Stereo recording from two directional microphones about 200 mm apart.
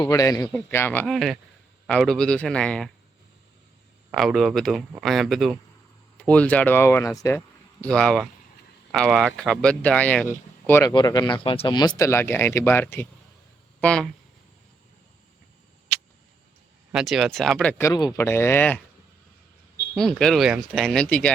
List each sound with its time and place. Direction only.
0.0 s speech: 15° left (ahead or behind)
4.1 s speech: centre (ahead or behind)
16.9 s speech: centre (ahead or behind)
20.0 s speech: 5° left (ahead or behind)